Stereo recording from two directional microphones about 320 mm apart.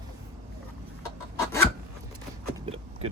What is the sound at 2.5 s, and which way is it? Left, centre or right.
Vehicle, centre.